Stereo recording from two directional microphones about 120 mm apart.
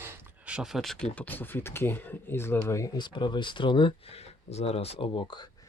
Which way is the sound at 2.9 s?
40° left (ahead or behind).